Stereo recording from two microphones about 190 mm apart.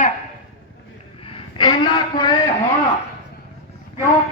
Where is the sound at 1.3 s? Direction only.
25° left (ahead or behind).